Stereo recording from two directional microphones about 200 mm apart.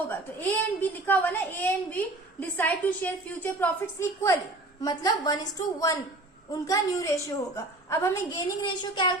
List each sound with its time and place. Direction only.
0.1 s a woman's voice: 10° left (ahead or behind)
4.8 s a woman's voice: 20° left (ahead or behind)